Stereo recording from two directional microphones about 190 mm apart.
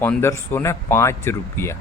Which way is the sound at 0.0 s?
10° left (ahead or behind).